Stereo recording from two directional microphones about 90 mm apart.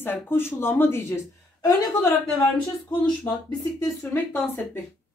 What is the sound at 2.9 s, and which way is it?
Speech, 60° left (ahead or behind).